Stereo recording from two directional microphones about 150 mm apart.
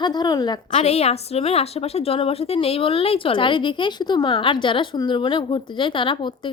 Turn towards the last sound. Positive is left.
turn(degrees=35)  # may be behind; listen again after turning